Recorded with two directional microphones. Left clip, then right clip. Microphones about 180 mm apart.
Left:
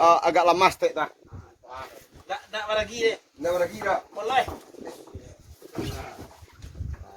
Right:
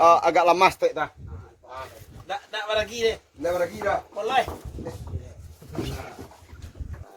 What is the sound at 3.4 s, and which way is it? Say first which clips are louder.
Speech: even; 35° left (ahead or behind).